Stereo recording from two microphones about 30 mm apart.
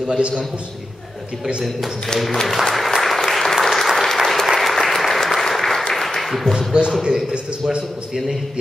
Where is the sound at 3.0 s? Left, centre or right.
Centre.